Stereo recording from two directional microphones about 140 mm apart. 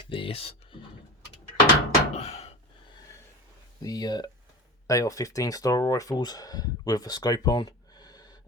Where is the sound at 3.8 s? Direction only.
25° left (ahead or behind).